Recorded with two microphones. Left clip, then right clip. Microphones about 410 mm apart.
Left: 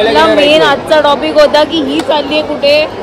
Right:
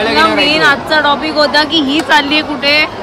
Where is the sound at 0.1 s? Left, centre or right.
Left.